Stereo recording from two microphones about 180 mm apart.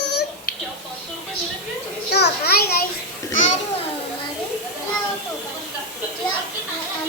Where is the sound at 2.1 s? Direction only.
65° left (ahead or behind).